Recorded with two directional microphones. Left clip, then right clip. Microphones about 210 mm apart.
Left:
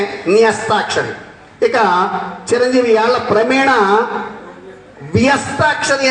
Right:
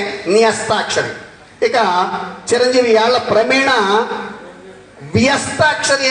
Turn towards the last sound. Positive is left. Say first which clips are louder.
# even
turn(degrees=50)  # may be behind; listen again after turning